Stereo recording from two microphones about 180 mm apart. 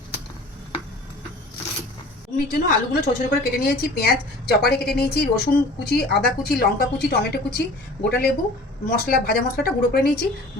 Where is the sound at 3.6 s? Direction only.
60° left (ahead or behind).